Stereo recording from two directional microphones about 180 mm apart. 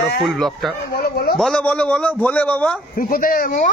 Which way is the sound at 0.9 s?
60° left (ahead or behind).